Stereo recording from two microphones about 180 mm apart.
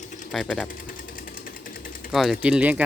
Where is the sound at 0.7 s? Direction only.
50° left (ahead or behind).